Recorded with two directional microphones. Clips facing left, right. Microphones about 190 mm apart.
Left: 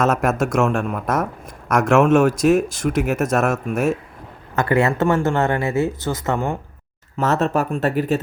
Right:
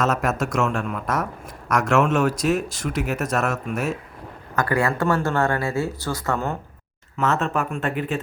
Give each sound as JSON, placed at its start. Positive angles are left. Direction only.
{"t": 0.0, "sound": "speech", "side_deg": 50}
{"t": 4.5, "sound": "speech", "side_deg": 25}
{"t": 7.2, "sound": "speech", "side_deg": 40}